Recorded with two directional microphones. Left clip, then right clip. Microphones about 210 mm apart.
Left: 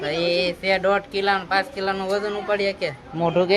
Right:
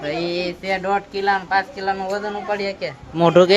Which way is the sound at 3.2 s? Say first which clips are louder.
Right 7 dB; 20° right (ahead or behind).